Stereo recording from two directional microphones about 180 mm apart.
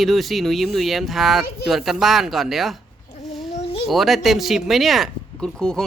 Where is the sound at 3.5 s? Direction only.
35° left (ahead or behind).